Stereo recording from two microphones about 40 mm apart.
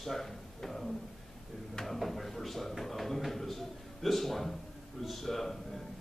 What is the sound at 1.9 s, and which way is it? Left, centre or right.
A man's voice, centre.